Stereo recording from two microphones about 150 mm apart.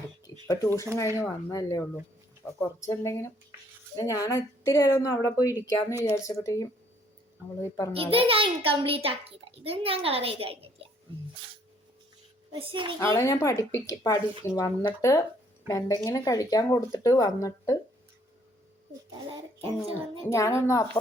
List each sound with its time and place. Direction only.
0.4 s speech: 25° left (ahead or behind)
2.4 s speech: 10° left (ahead or behind)
5.5 s speech: 15° right (ahead or behind)
6.1 s speech: 20° left (ahead or behind)
7.9 s a child's voice: 40° right (ahead or behind)
12.5 s a child's voice: 35° right (ahead or behind)
13.0 s speech: 20° left (ahead or behind)
20.3 s speech: 20° left (ahead or behind)